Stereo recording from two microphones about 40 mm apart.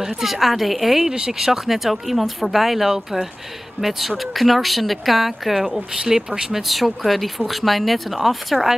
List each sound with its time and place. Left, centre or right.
0.0 s speech: centre
3.8 s speech: right
4.2 s speech: centre